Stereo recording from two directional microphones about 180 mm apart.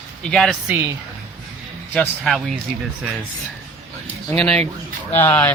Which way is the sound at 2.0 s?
Centre (ahead or behind).